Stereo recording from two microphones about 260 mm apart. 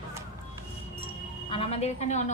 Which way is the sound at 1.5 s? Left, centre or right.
Left.